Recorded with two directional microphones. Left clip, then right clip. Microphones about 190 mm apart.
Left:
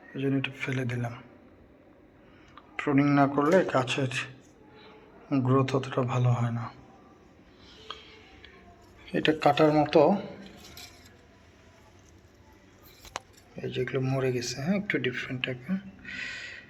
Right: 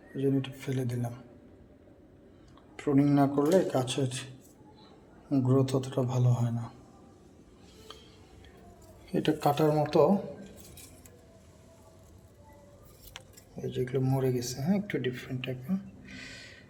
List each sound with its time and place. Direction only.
0.2 s speech: 20° right (ahead or behind)
2.7 s speech: 15° right (ahead or behind)
5.5 s speech: 15° right (ahead or behind)
9.0 s speech: 20° right (ahead or behind)
13.6 s speech: 15° right (ahead or behind)